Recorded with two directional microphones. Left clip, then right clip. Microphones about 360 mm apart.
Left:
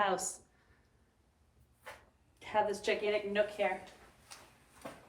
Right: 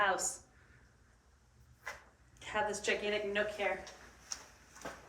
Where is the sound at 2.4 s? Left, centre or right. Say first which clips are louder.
Left 3 dB; left.